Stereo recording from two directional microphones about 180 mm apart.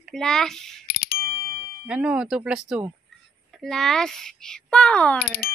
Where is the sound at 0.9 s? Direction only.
55° left (ahead or behind).